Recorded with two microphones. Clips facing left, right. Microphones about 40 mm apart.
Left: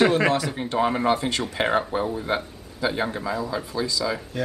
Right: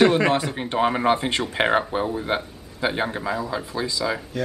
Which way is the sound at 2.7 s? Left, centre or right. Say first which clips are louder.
Right 1 dB; right.